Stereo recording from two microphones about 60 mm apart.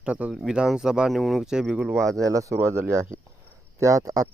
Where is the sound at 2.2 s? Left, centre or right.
Right.